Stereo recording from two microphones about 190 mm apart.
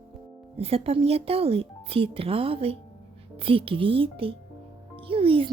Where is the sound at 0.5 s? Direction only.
30° right (ahead or behind).